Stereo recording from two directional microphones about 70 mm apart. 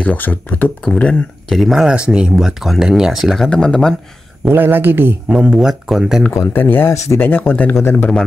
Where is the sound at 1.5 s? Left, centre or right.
Centre.